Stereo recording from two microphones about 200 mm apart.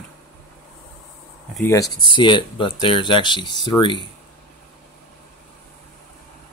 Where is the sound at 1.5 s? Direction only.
10° left (ahead or behind).